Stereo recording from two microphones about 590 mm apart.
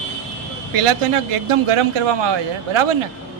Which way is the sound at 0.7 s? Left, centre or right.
Right.